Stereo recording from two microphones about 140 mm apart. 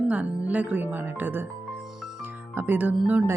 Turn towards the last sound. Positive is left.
turn(degrees=-10)  # may be behind; listen again after turning